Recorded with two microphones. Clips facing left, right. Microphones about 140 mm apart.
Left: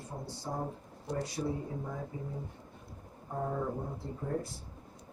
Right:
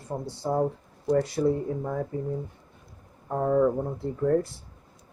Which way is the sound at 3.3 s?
85° right.